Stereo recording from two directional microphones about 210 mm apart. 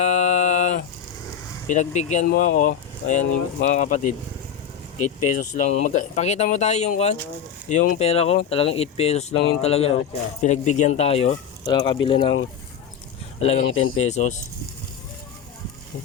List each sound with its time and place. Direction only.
0.0 s a sound: 35° left (ahead or behind)
1.6 s speech: 35° left (ahead or behind)
13.4 s speech: 30° left (ahead or behind)
13.7 s speech: 80° left
14.1 s speech: 35° left (ahead or behind)